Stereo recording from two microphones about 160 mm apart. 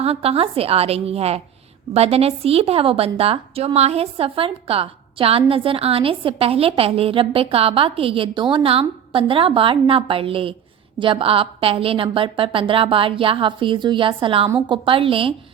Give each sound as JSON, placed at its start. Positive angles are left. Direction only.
{"t": 0.0, "sound": "a woman's voice", "side_deg": -40}